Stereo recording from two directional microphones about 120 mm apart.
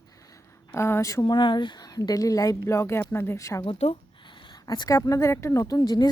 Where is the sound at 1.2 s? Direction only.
40° left (ahead or behind).